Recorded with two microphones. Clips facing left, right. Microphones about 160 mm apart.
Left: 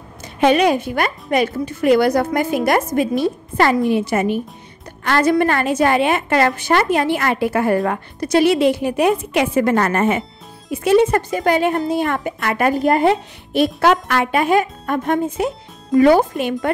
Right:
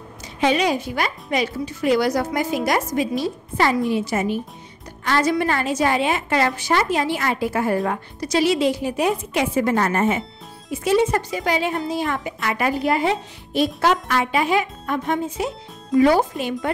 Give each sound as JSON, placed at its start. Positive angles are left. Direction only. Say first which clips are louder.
{"t": 0.4, "sound": "a woman's voice", "louder": "left 5 dB", "side_deg": 55}